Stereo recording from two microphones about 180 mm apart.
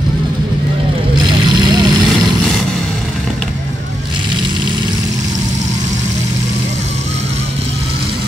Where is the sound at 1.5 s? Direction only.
25° right (ahead or behind).